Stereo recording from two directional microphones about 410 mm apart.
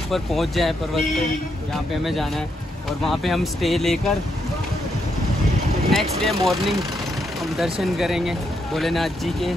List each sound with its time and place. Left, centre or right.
0.1 s speech: centre
5.9 s speech: centre
7.4 s vehicle: centre
7.8 s speech: centre